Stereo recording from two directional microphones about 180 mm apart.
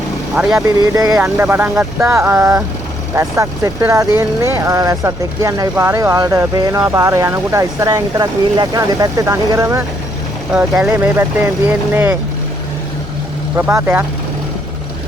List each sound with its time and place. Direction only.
0.5 s speech: 20° right (ahead or behind)
13.6 s speech: 10° right (ahead or behind)